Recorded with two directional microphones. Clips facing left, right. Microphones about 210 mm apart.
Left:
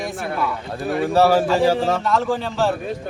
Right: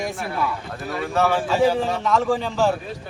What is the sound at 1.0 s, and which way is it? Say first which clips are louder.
Speech: left 5 dB; 35° left (ahead or behind).